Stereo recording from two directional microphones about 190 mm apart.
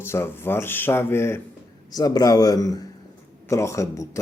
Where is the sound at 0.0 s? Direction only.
15° left (ahead or behind).